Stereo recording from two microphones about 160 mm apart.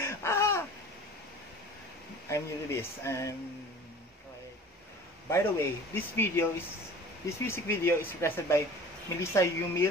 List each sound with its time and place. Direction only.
0.0 s a sound: 15° left (ahead or behind)
2.2 s speech: 15° left (ahead or behind)
5.3 s speech: 15° left (ahead or behind)